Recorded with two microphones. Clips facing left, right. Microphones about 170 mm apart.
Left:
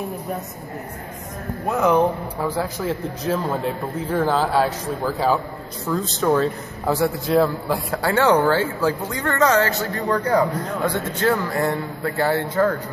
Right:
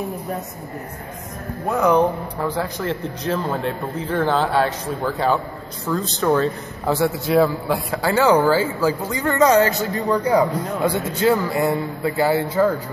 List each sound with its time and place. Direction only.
1.7 s a man's voice: 5° left (ahead or behind)